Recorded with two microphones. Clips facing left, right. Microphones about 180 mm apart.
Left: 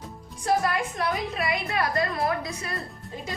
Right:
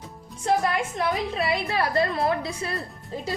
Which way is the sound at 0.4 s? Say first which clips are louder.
Right 1 dB; 25° right (ahead or behind).